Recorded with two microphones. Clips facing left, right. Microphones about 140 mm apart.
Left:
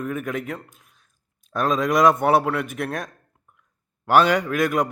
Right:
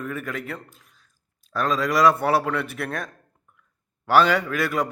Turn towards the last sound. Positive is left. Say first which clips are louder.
# left 3 dB
turn(degrees=15)  # may be behind; listen again after turning